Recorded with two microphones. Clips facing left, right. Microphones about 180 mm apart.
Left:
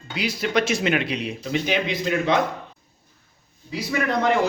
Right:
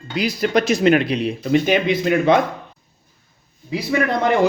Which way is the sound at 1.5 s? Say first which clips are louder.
Right 7 dB; 50° right (ahead or behind).